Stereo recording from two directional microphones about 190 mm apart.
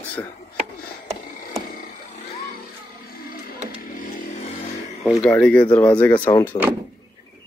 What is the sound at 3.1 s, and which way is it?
Music, 50° left (ahead or behind).